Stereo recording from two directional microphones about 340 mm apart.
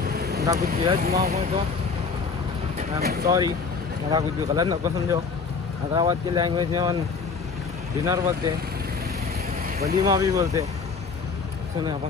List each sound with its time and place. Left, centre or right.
0.0 s vehicle: right
0.7 s speech: centre
3.0 s speech: right
3.3 s speech: centre
8.0 s speech: centre
10.0 s speech: centre